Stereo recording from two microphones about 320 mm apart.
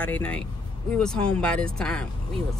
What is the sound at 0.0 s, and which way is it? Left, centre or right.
Speech, centre.